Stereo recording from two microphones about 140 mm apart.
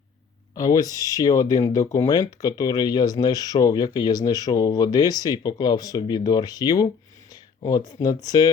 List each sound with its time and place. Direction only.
0.5 s speech: 25° left (ahead or behind)